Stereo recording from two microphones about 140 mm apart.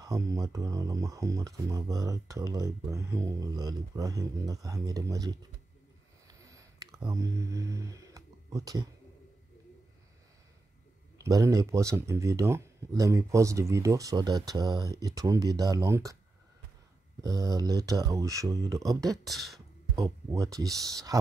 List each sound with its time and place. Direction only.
0.0 s speech: 25° right (ahead or behind)
6.2 s a sound: 25° right (ahead or behind)
11.1 s speech: 25° right (ahead or behind)
17.2 s speech: 25° right (ahead or behind)
18.9 s speech: centre (ahead or behind)
20.0 s speech: 25° right (ahead or behind)